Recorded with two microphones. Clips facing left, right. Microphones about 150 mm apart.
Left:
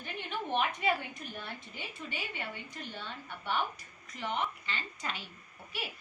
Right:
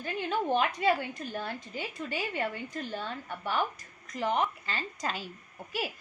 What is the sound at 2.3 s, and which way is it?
A woman's voice, 45° right (ahead or behind).